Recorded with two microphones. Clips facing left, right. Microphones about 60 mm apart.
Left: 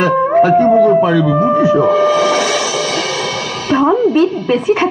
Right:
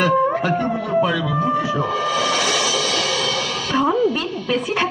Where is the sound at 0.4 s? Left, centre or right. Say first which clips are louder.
Left 13 dB; left.